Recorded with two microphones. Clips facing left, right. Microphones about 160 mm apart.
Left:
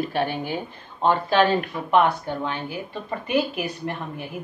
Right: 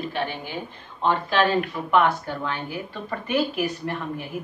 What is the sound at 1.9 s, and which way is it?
Speech, 20° left (ahead or behind).